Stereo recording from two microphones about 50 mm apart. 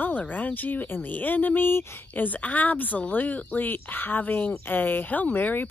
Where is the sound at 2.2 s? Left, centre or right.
Left.